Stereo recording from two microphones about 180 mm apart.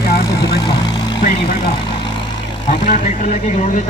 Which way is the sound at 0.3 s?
25° left (ahead or behind).